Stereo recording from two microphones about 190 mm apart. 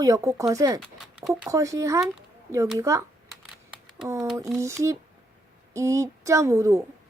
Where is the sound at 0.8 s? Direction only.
5° right (ahead or behind).